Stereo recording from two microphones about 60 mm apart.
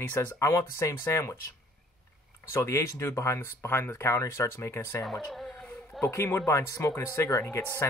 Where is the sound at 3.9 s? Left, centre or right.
Left.